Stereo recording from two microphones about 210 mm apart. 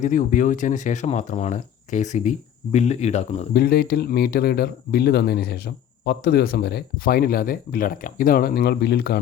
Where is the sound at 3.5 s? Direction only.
50° left (ahead or behind).